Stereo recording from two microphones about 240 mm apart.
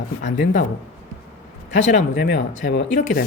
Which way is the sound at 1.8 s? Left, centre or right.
Left.